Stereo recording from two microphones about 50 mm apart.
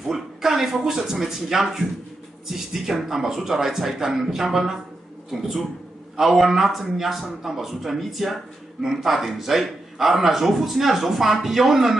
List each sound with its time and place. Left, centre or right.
0.0 s a man's voice: centre